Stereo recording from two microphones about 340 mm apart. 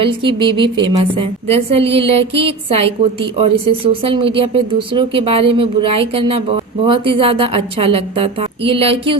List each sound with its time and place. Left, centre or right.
0.0 s a woman's voice: centre